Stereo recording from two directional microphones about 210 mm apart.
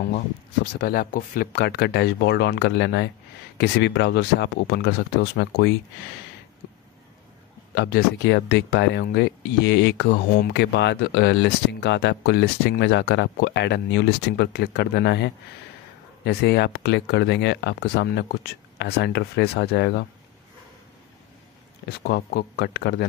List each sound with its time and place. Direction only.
0.7 s speech: 45° left (ahead or behind)
7.7 s speech: 55° left (ahead or behind)
21.8 s speech: 50° left (ahead or behind)